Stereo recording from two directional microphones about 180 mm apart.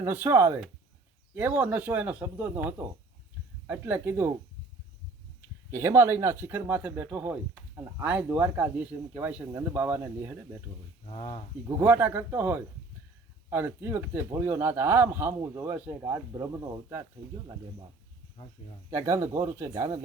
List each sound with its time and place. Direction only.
0.0 s speech: 10° right (ahead or behind)
5.7 s speech: 15° right (ahead or behind)
11.1 s speech: 35° left (ahead or behind)
11.8 s speech: 10° right (ahead or behind)
18.9 s speech: 15° right (ahead or behind)